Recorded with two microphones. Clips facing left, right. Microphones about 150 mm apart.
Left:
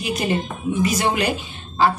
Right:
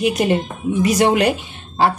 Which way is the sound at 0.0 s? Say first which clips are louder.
Right 5 dB; 70° right (ahead or behind).